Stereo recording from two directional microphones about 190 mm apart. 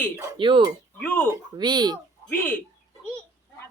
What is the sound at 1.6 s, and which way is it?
Speech, 25° right (ahead or behind).